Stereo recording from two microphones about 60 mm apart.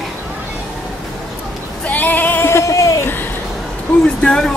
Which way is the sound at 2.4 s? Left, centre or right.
Left.